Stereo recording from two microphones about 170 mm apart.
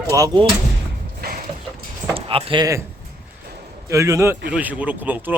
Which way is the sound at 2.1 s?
35° right (ahead or behind).